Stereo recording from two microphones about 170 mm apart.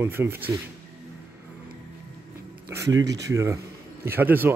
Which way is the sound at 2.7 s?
20° right (ahead or behind).